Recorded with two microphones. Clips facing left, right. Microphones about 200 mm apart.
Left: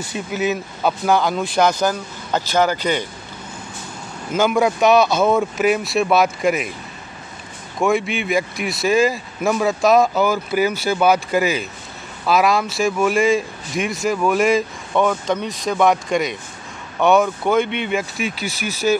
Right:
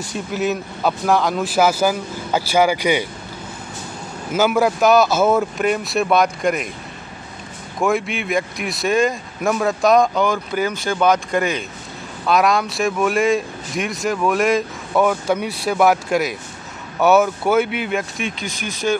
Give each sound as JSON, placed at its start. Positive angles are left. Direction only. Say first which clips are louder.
{"t": 0.0, "sound": "a man's voice", "louder": "even", "side_deg": 0}
{"t": 4.3, "sound": "a man's voice", "louder": "even", "side_deg": -5}
{"t": 7.8, "sound": "a man's voice", "louder": "left 1 dB", "side_deg": 0}